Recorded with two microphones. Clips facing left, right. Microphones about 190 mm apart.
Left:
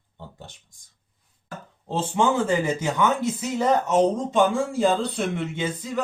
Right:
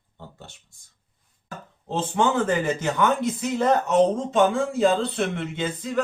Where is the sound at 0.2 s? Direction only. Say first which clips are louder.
Left 1 dB; 15° left (ahead or behind).